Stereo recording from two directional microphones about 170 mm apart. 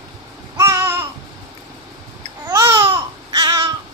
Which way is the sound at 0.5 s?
20° right (ahead or behind).